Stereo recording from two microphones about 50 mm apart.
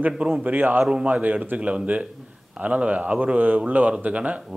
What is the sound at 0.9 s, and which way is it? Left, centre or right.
Speech, right.